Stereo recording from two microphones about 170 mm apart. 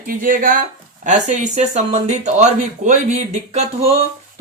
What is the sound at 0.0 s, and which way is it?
Speech, 55° right (ahead or behind).